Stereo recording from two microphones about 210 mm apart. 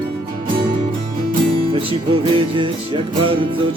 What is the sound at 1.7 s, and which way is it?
Music, 25° right (ahead or behind).